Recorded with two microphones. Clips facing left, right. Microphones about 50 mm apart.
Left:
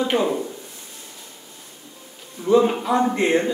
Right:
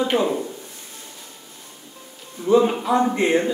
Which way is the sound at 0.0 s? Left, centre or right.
Centre.